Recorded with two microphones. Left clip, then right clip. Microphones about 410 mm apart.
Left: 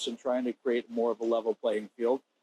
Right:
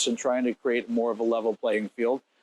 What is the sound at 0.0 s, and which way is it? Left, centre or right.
Speech, right.